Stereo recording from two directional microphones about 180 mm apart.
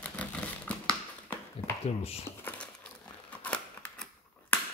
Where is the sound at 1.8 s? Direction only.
35° left (ahead or behind).